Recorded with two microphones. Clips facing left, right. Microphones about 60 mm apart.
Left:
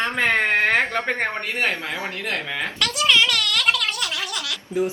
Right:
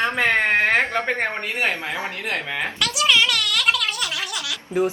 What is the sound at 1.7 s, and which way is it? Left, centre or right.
Speech, right.